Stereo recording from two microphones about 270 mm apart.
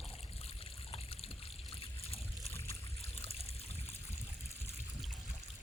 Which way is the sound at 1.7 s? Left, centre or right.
Left.